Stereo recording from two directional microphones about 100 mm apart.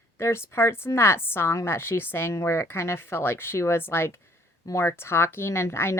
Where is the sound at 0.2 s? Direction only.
25° left (ahead or behind).